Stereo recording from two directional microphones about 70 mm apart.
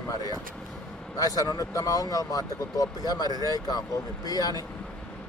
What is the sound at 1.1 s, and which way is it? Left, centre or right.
Speech, left.